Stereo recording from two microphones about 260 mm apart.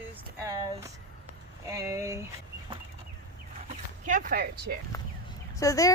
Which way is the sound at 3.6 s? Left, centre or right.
Right.